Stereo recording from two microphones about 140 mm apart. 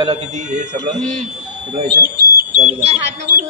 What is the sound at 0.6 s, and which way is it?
Speech, 60° right (ahead or behind).